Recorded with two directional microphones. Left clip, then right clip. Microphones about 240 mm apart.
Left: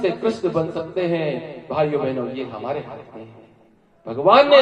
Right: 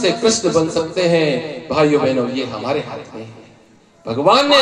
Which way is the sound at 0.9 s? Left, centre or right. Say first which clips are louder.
Right 7 dB; right.